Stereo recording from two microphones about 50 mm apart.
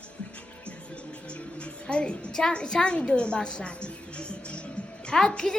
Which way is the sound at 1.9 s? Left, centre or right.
Left.